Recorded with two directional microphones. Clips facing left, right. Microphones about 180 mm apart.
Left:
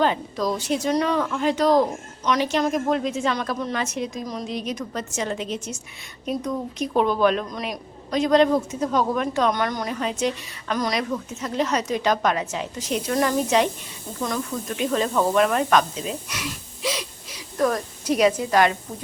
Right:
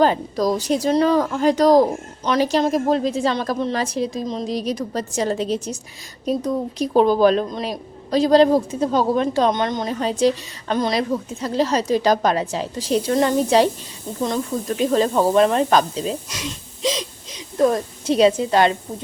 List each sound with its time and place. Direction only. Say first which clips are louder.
0.0 s a woman's voice: right 5 dB; 40° right (ahead or behind)